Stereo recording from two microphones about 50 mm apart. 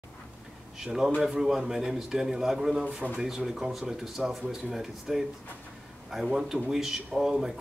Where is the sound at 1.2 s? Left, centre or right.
Centre.